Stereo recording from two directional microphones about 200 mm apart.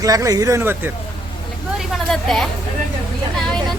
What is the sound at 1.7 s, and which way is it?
Vehicle, centre (ahead or behind).